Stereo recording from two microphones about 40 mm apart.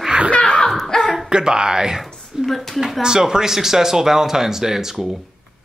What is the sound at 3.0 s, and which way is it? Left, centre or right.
Speech, centre.